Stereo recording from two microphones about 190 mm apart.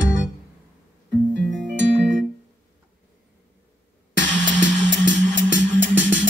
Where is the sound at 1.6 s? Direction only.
75° right (ahead or behind).